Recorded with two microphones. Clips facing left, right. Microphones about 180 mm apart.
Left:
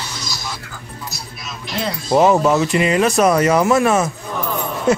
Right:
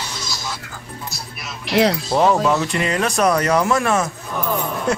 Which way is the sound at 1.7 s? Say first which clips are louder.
Right 8 dB; 80° right.